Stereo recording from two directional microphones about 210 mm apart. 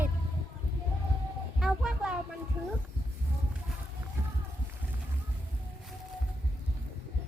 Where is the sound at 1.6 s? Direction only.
5° right (ahead or behind).